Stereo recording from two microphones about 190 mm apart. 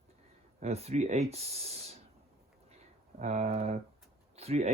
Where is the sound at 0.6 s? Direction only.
35° right (ahead or behind).